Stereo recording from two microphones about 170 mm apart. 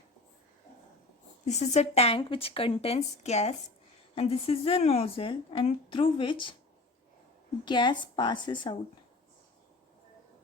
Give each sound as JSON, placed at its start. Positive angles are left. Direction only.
{"t": 1.5, "sound": "a woman's voice", "side_deg": 40}
{"t": 7.6, "sound": "a woman's voice", "side_deg": 25}